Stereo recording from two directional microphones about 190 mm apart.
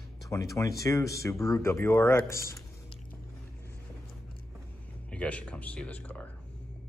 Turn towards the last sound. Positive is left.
turn(degrees=5)  # may be behind; listen again after turning